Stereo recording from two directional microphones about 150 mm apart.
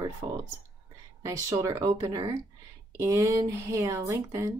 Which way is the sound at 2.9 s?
20° right (ahead or behind).